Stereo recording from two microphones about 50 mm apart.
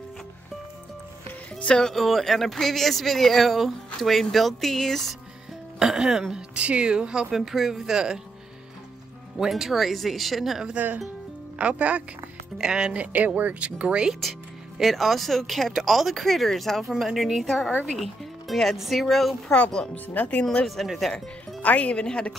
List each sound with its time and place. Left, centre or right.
2.0 s speech: centre
5.8 s speech: centre
6.5 s speech: right
7.3 s speech: centre
9.4 s speech: centre
11.5 s speech: right
12.5 s speech: centre
14.8 s speech: centre
19.5 s speech: left
20.6 s speech: centre
21.6 s a woman's voice: left